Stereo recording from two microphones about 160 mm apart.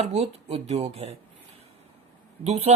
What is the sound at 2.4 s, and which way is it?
Speech, 45° right (ahead or behind).